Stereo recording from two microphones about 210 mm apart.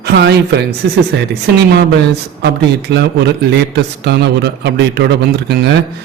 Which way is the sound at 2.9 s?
55° right (ahead or behind).